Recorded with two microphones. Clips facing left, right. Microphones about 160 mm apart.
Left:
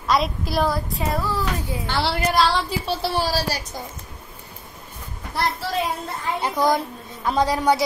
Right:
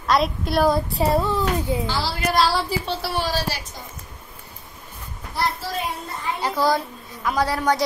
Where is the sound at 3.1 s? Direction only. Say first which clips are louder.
Even; 35° left (ahead or behind).